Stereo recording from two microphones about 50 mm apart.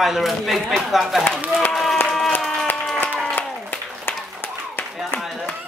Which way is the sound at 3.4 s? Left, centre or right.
Left.